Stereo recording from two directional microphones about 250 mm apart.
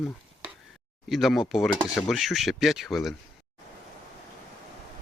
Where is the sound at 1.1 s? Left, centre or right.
Centre.